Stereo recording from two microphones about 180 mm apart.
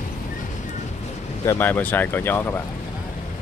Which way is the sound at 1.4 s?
15° left (ahead or behind).